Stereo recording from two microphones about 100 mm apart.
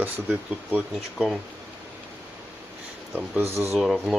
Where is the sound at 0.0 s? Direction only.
20° right (ahead or behind).